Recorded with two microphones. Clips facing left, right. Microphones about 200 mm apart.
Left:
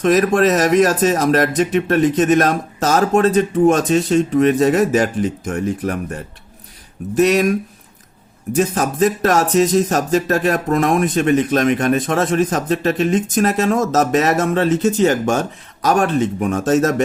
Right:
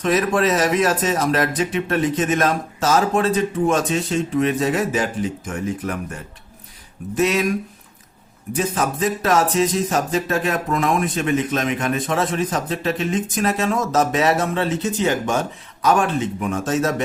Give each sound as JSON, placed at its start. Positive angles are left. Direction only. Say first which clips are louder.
{"t": 0.0, "sound": "speech", "louder": "left 5 dB", "side_deg": 45}
{"t": 7.2, "sound": "speech", "louder": "left 5 dB", "side_deg": 40}
{"t": 8.5, "sound": "speech", "louder": "left 5 dB", "side_deg": 45}